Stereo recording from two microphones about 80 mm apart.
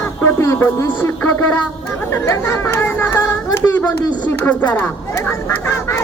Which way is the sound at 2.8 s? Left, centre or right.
Left.